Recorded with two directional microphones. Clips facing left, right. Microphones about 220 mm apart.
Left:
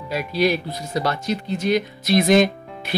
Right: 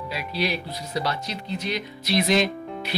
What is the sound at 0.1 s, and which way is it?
Speech, 45° left (ahead or behind).